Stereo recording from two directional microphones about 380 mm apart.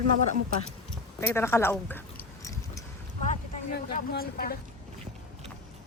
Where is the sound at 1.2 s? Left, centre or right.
Centre.